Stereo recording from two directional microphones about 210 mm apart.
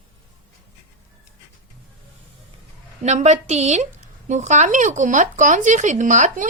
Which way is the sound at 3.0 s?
35° right (ahead or behind).